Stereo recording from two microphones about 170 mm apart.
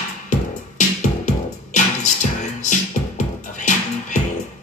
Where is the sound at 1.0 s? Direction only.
45° left (ahead or behind).